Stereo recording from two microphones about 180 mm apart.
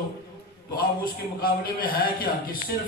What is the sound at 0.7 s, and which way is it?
A man's voice, 55° left (ahead or behind).